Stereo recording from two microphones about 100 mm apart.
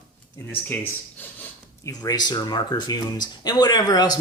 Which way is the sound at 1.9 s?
40° left (ahead or behind).